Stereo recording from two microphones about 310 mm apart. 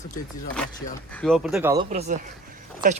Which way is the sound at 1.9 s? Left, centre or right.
Right.